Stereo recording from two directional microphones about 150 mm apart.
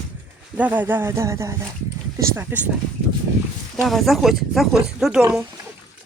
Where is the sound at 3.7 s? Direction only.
Centre (ahead or behind).